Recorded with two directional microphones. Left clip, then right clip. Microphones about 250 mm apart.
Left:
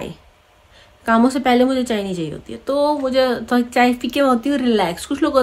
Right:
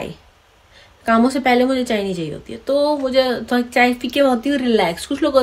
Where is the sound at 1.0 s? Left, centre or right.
Centre.